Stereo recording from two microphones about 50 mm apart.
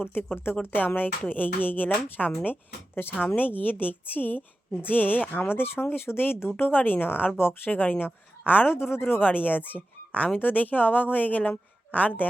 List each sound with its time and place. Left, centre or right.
0.0 s a woman's voice: left
5.5 s a woman's voice: left
8.7 s a woman's voice: left
10.2 s a woman's voice: left